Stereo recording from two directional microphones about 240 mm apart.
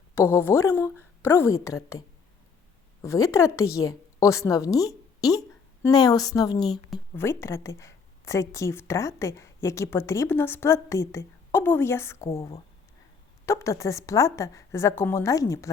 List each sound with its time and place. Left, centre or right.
0.1 s a woman's voice: centre